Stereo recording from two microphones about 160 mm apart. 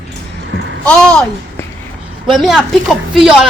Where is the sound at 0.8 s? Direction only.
5° left (ahead or behind).